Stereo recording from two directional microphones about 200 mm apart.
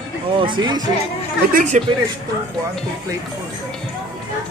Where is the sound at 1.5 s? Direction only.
40° right (ahead or behind).